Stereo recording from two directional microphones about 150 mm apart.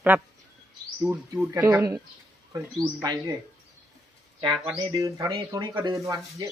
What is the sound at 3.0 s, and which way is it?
Speech, 25° right (ahead or behind).